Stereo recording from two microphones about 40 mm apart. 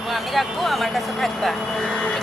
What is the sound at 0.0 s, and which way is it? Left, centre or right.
Speech, centre.